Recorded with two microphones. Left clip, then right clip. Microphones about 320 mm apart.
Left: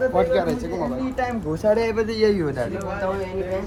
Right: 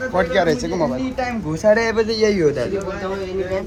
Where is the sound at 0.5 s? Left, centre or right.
Right.